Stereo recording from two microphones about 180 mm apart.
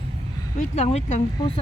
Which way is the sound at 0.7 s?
35° left (ahead or behind).